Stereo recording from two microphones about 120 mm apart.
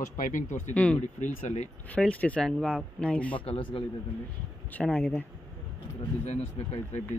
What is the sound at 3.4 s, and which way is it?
Speech, 50° left (ahead or behind).